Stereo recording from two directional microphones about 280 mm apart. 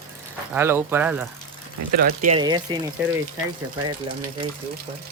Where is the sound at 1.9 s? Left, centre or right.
Right.